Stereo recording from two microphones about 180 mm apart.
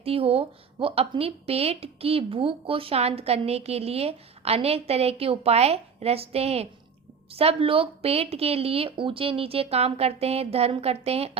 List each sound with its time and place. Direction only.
0.0 s speech: 35° right (ahead or behind)